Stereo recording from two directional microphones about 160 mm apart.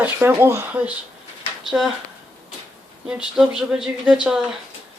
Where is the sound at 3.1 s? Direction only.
5° right (ahead or behind).